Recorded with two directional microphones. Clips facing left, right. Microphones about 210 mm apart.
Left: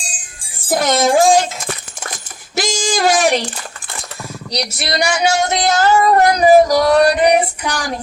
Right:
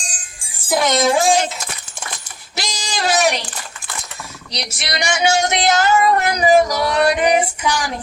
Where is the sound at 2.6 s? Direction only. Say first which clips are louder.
Left 7 dB; 50° left (ahead or behind).